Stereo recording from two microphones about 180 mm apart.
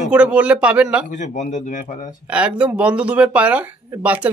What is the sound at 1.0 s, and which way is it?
Speech, 45° left (ahead or behind).